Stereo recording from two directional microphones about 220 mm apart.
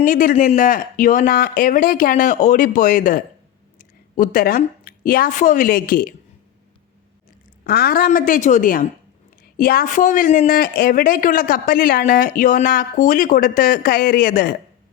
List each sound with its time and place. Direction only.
0.0 s a woman's voice: 40° left (ahead or behind)
7.6 s speech: 45° left (ahead or behind)